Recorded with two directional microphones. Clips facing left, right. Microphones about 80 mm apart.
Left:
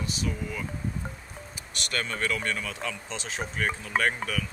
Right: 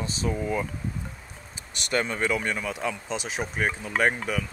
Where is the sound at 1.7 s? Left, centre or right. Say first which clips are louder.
Right 5 dB; right.